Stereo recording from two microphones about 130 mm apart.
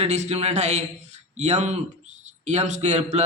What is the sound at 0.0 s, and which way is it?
A man's voice, 60° right (ahead or behind).